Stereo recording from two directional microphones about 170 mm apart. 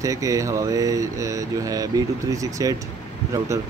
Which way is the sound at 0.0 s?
20° right (ahead or behind).